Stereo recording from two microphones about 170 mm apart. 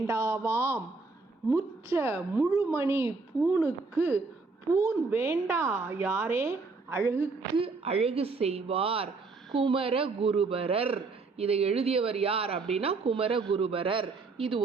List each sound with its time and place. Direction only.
0.1 s a woman's voice: 15° right (ahead or behind)
7.5 s a man's voice: 35° right (ahead or behind)